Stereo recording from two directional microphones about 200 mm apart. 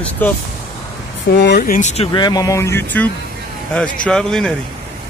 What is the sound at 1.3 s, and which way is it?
Speech, 55° left (ahead or behind).